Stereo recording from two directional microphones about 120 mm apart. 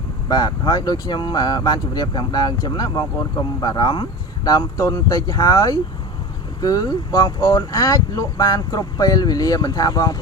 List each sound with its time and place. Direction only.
0.3 s speech: 35° left (ahead or behind)